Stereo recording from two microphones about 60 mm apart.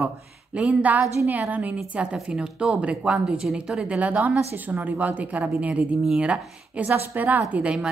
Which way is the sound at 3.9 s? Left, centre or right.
Right.